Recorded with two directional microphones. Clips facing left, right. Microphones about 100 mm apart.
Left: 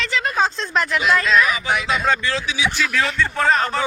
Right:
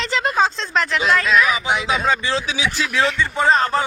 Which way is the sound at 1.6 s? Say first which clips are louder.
Right 1 dB; 20° right (ahead or behind).